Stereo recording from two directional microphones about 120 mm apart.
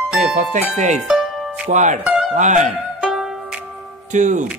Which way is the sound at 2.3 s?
90° right.